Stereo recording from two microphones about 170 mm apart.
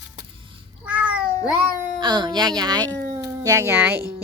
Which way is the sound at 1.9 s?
25° right (ahead or behind).